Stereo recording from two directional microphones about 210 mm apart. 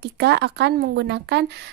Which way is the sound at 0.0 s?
55° right (ahead or behind).